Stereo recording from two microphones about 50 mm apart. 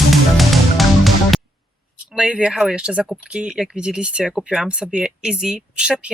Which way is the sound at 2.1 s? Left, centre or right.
Centre.